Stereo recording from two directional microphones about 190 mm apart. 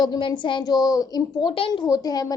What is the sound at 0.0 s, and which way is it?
A child's voice, 25° left (ahead or behind).